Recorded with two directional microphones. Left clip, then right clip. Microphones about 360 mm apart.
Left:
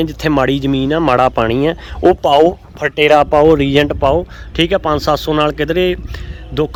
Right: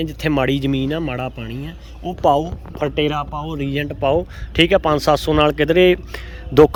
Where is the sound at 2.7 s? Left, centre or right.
Centre.